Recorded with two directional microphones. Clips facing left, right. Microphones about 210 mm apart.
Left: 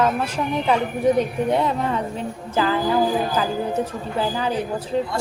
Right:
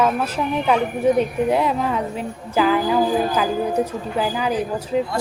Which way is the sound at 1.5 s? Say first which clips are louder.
Right 1 dB; 5° right (ahead or behind).